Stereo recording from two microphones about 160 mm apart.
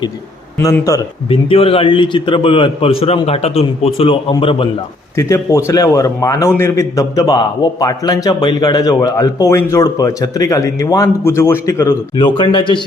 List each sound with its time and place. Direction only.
0.6 s a man's voice: 20° left (ahead or behind)
1.3 s a man's voice: 35° left (ahead or behind)
5.1 s a man's voice: 20° left (ahead or behind)
12.1 s a man's voice: 30° left (ahead or behind)